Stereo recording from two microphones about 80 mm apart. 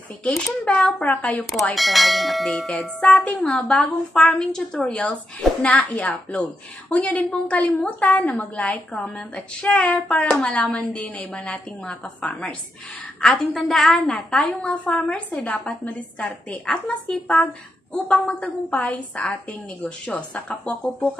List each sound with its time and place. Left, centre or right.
0.3 s a woman's voice: centre
1.4 s a woman's voice: centre
13.6 s a woman's voice: centre